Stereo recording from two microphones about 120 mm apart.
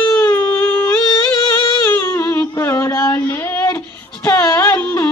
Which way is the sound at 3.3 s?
20° left (ahead or behind).